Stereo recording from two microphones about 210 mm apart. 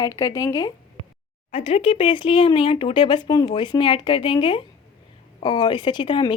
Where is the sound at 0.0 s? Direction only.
15° left (ahead or behind).